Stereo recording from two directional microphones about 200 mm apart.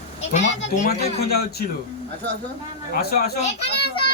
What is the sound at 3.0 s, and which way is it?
Speech, 50° left (ahead or behind).